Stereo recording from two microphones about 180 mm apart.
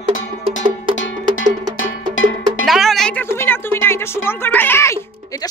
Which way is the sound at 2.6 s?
Centre (ahead or behind).